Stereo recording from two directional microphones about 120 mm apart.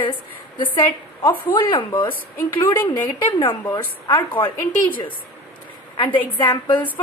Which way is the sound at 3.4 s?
35° left (ahead or behind).